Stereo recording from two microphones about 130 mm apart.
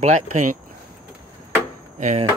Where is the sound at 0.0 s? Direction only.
75° right (ahead or behind).